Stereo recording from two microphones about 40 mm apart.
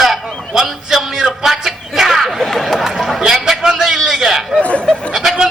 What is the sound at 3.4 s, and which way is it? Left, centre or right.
Speech, centre.